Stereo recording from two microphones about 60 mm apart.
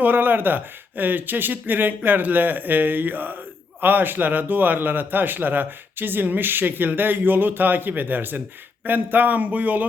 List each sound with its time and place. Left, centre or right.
0.0 s a man's voice: right